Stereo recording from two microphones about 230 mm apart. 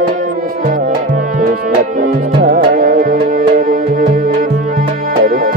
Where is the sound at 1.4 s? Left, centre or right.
Right.